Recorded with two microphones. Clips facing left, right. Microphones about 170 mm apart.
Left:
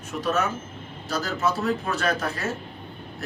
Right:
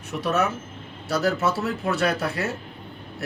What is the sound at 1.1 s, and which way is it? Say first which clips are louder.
Speech: right 3 dB; 65° right (ahead or behind).